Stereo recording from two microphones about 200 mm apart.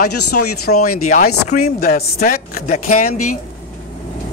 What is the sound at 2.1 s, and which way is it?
Speech, 35° left (ahead or behind).